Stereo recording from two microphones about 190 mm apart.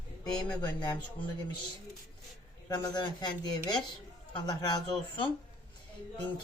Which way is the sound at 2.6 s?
20° left (ahead or behind).